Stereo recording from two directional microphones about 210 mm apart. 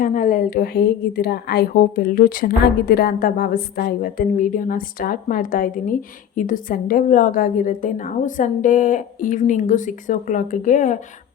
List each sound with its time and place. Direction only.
0.0 s a woman's voice: 40° left (ahead or behind)